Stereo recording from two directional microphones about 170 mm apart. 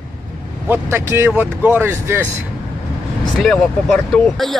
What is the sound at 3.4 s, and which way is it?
Speech, 5° left (ahead or behind).